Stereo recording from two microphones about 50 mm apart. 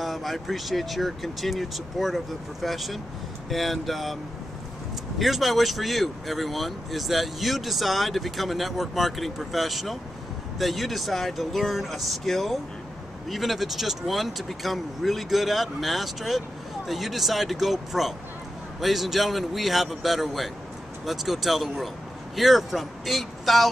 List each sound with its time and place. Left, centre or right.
0.0 s speech: centre
5.2 s speech: centre